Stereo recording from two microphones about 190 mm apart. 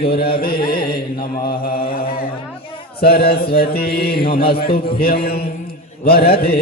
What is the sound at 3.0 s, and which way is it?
Mantra, 55° left (ahead or behind).